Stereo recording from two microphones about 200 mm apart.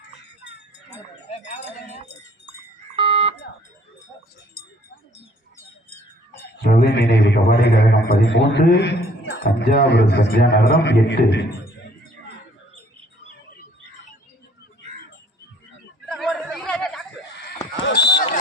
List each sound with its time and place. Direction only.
1.3 s a sound: 35° left (ahead or behind)
2.9 s alarm: 25° right (ahead or behind)
6.6 s a man's voice: 50° left (ahead or behind)
16.0 s chatter: centre (ahead or behind)
17.8 s run: 55° left (ahead or behind)